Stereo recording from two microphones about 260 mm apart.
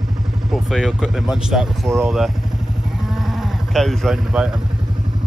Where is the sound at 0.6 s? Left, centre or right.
Centre.